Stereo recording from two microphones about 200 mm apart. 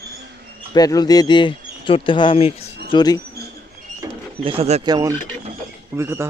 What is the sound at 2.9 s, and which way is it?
Speech, 20° left (ahead or behind).